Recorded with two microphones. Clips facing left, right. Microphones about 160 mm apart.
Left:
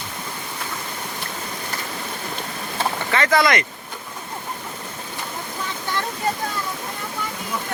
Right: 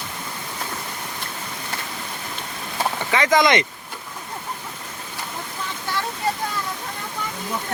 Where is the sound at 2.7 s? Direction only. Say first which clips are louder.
Even; 15° right (ahead or behind).